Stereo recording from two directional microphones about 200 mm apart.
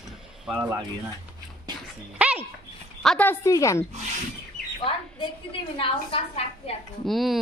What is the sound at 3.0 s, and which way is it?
Speech, 5° left (ahead or behind).